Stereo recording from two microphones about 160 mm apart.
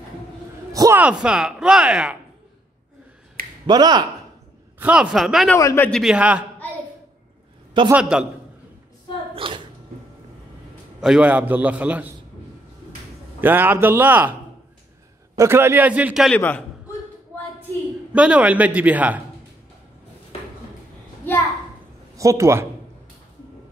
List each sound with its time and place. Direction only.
0.7 s a sound: 20° right (ahead or behind)
1.0 s speech: 5° right (ahead or behind)
3.6 s speech: 25° right (ahead or behind)
4.7 s speech: 5° right (ahead or behind)
5.6 s a man's voice: 20° left (ahead or behind)
5.9 s speech: centre (ahead or behind)
7.9 s speech: 5° right (ahead or behind)
9.3 s a sound: 35° right (ahead or behind)
11.0 s a man's voice: 5° right (ahead or behind)
13.4 s a man's voice: 15° right (ahead or behind)
15.3 s a man's voice: 15° right (ahead or behind)
16.3 s a man's voice: 10° left (ahead or behind)
18.1 s a man's voice: 10° right (ahead or behind)
22.1 s a man's voice: 20° right (ahead or behind)